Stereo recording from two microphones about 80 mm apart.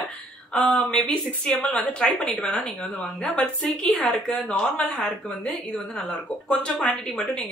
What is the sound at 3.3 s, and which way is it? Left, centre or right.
Speech, centre.